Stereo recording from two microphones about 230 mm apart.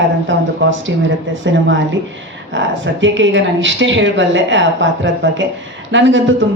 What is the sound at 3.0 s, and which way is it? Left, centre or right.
Speech, right.